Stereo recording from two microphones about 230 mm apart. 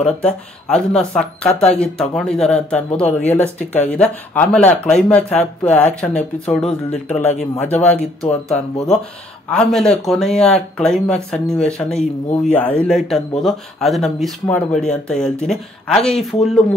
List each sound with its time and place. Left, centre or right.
0.0 s speech: centre
1.5 s speech: left
1.8 s speech: centre